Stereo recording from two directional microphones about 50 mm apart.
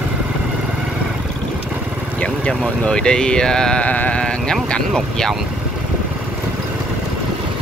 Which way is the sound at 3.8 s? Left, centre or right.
Left.